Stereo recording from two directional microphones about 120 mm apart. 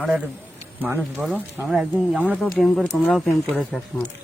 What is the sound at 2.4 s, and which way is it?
Speech, 5° left (ahead or behind).